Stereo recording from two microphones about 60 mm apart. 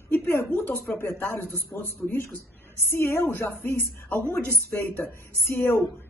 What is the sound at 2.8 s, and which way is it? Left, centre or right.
A woman's voice, left.